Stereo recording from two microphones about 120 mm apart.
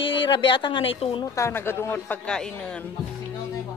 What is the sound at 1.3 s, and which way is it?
Speech, 20° left (ahead or behind).